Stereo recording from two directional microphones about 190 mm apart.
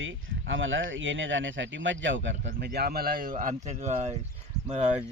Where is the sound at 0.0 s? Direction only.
90° right; by 4.2 s 35° right (ahead or behind).